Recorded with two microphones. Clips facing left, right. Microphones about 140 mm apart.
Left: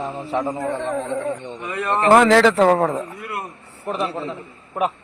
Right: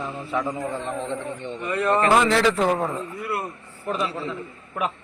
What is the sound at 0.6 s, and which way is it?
Speech, 70° left (ahead or behind).